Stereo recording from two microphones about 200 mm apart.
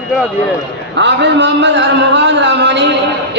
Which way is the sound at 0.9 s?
60° right (ahead or behind).